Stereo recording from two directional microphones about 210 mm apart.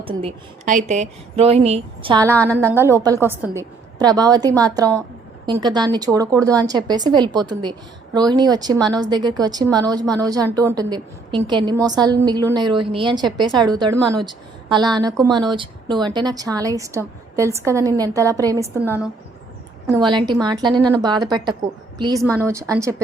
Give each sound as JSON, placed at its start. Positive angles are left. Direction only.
{"t": 0.0, "sound": "speech", "side_deg": -25}
{"t": 2.3, "sound": "a woman's voice", "side_deg": 5}
{"t": 2.6, "sound": "a woman's voice", "side_deg": -10}
{"t": 20.0, "sound": "a woman's voice", "side_deg": -20}